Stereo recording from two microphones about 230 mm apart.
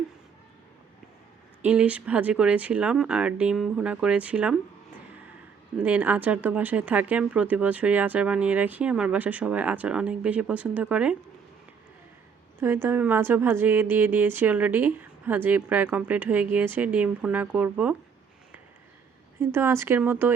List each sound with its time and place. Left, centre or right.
1.6 s speech: centre
5.8 s speech: centre
12.5 s speech: centre
19.4 s speech: centre